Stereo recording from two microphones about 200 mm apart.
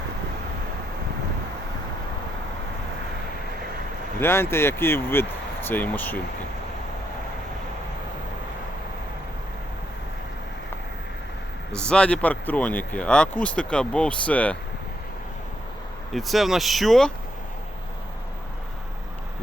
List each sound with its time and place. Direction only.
4.2 s speech: 10° left (ahead or behind)
11.7 s speech: 5° left (ahead or behind)
16.1 s speech: centre (ahead or behind)